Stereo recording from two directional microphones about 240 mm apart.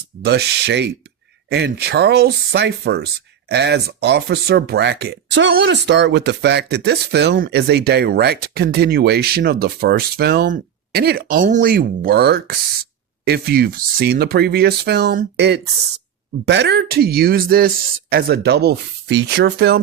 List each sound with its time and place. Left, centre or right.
0.2 s speech: right